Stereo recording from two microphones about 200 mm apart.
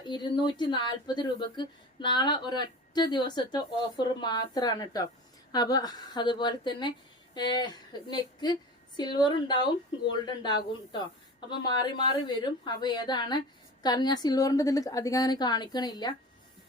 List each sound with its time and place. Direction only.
0.0 s speech: 20° left (ahead or behind)